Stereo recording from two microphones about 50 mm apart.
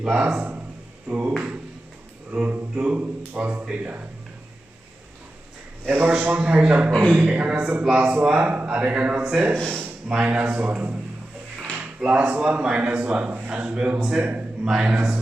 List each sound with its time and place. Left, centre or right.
0.0 s a man's voice: centre
2.3 s a man's voice: right
5.8 s a man's voice: right
14.6 s speech: centre